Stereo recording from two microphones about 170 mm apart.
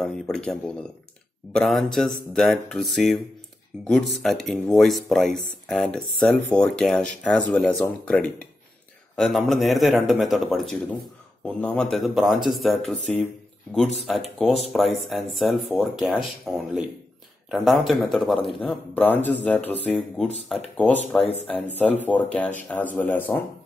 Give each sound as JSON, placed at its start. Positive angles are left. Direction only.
{"t": 0.0, "sound": "speech", "side_deg": 5}